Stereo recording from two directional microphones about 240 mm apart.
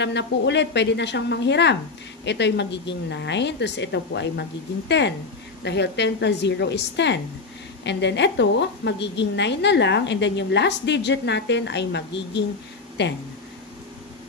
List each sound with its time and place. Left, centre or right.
0.0 s a woman's voice: left